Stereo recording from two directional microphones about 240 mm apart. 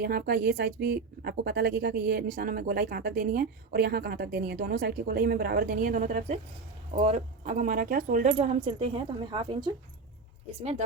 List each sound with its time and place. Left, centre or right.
0.0 s a woman's voice: right